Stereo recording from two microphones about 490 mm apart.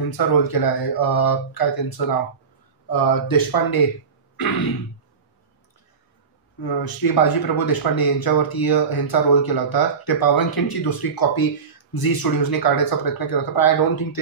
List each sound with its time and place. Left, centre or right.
0.4 s speech: left
6.6 s speech: left